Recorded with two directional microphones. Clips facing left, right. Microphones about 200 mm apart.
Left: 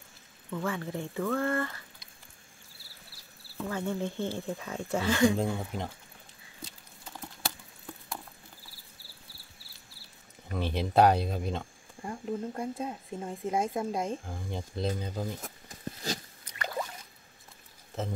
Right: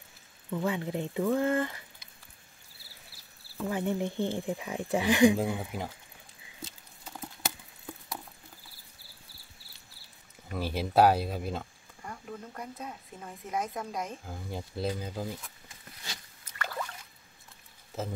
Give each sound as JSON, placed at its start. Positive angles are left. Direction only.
{"t": 0.5, "sound": "speech", "side_deg": -15}
{"t": 3.6, "sound": "speech", "side_deg": -15}
{"t": 6.6, "sound": "a sound", "side_deg": 0}
{"t": 10.5, "sound": "speech", "side_deg": -5}
{"t": 12.0, "sound": "speech", "side_deg": 25}
{"t": 14.2, "sound": "speech", "side_deg": -5}
{"t": 15.4, "sound": "a sound", "side_deg": 40}
{"t": 16.5, "sound": "a sound", "side_deg": 15}
{"t": 17.9, "sound": "speech", "side_deg": 0}